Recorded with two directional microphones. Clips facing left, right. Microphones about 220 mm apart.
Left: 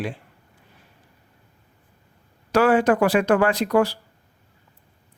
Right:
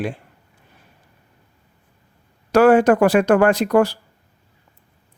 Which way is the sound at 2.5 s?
45° right (ahead or behind).